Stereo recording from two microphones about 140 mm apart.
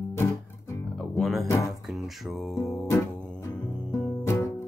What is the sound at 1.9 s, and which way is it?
Mantra, centre (ahead or behind).